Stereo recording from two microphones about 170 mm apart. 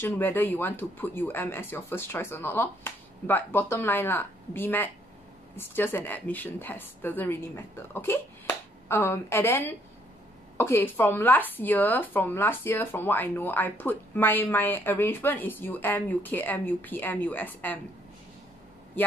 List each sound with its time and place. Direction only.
0.0 s speech: 10° left (ahead or behind)